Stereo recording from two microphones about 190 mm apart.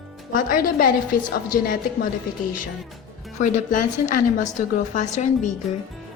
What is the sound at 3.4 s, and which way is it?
A woman's voice, 45° left (ahead or behind).